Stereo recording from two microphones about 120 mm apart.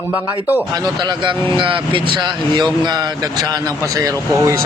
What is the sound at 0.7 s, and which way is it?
A man's voice, 35° right (ahead or behind).